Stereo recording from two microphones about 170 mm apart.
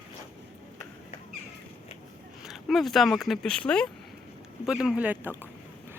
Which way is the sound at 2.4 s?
Centre (ahead or behind).